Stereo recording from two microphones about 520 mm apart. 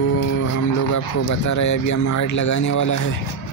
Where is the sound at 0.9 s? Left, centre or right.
Left.